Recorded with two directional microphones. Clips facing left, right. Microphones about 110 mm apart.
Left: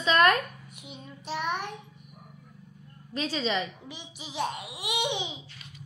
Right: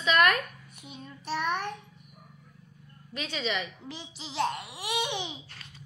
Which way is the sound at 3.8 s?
15° left (ahead or behind).